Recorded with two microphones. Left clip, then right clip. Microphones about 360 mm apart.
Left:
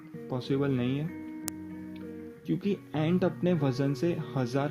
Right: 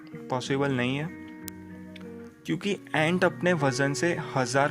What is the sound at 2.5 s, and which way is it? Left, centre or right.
Speech, right.